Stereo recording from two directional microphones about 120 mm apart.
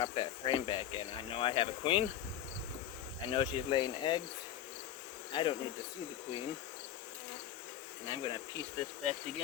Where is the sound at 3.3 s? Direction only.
45° left (ahead or behind).